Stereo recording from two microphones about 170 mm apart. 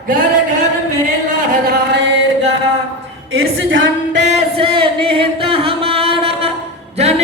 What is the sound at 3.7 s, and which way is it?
Music, 90° right.